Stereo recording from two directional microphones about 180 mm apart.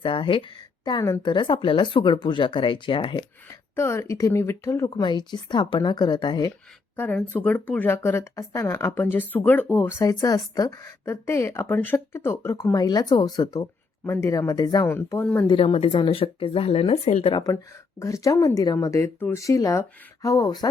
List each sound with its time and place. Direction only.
0.0 s speech: 30° left (ahead or behind)
6.9 s speech: 10° left (ahead or behind)
15.4 s speech: 30° left (ahead or behind)
18.0 s speech: 20° left (ahead or behind)